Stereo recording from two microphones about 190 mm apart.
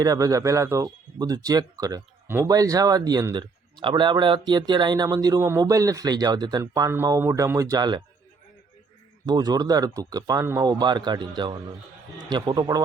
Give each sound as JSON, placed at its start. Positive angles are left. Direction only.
{"t": 0.0, "sound": "a man's voice", "side_deg": -20}
{"t": 9.2, "sound": "speech", "side_deg": -20}